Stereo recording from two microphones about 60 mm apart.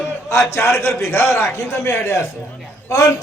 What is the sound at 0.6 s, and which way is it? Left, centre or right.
A man's voice, left.